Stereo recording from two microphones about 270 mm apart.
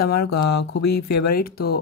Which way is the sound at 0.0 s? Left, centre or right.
Left.